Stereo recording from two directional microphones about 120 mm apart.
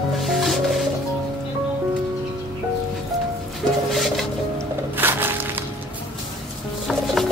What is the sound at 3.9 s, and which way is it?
Music, centre (ahead or behind).